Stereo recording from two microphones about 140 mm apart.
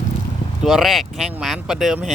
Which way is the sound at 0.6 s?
Centre (ahead or behind).